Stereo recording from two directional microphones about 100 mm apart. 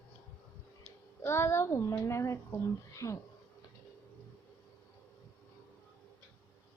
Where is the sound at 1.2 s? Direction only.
25° left (ahead or behind).